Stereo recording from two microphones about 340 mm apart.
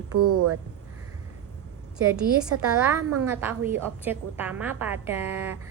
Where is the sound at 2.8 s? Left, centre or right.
Centre.